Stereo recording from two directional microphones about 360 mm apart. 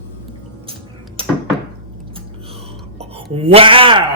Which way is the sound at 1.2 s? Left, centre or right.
Centre.